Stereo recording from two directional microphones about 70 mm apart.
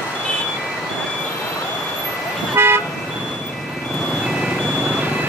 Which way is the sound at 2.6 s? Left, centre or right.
Right.